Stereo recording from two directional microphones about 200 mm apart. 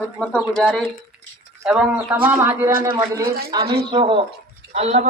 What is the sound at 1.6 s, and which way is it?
A man's voice, 5° right (ahead or behind).